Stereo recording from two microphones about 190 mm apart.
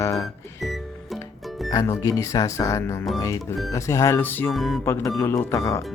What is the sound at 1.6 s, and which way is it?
Speech, 20° left (ahead or behind).